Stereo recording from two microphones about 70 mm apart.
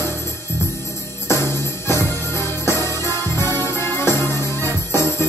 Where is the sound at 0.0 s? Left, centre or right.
Left.